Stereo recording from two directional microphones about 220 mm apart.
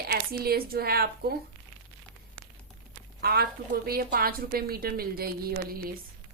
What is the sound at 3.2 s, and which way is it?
A woman's voice, 45° right (ahead or behind).